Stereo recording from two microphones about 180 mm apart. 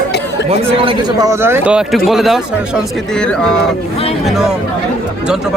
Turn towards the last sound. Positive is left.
turn(degrees=0)  # may be behind; listen again after turning